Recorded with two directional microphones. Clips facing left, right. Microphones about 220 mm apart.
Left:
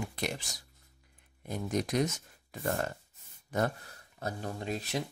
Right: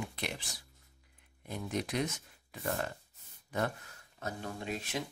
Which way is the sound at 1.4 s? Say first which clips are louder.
Left 4 dB; 40° left (ahead or behind).